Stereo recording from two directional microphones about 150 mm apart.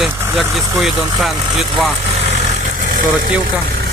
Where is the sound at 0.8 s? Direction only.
Centre (ahead or behind).